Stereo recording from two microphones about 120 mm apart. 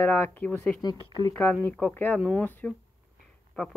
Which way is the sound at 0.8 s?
35° left (ahead or behind).